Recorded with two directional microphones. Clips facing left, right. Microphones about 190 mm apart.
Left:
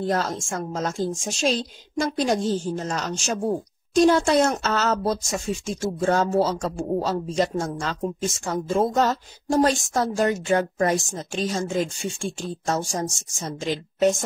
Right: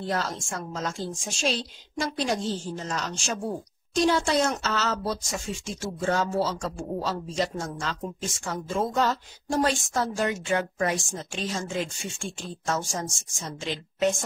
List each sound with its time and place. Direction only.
0.0 s a woman's voice: 45° left (ahead or behind)